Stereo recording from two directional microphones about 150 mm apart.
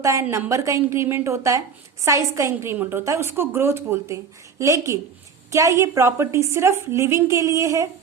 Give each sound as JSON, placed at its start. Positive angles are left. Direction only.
{"t": 0.0, "sound": "a woman's voice", "side_deg": -20}